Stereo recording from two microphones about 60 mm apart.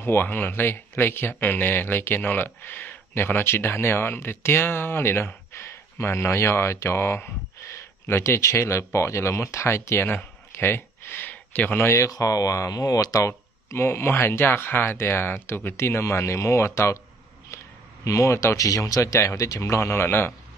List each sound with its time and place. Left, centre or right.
0.0 s speech: left
10.5 s a sound: left
11.8 s speech: left
12.1 s speech: left
13.7 s speech: left
18.0 s a man's voice: left
18.6 s speech: left
19.1 s speech: left